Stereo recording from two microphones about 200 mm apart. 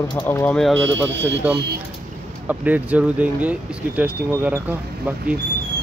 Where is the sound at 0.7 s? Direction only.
65° right (ahead or behind).